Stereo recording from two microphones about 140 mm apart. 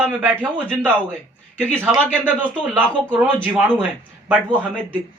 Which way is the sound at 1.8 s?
10° right (ahead or behind).